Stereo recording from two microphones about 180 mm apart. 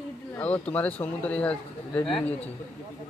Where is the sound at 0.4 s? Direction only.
10° left (ahead or behind).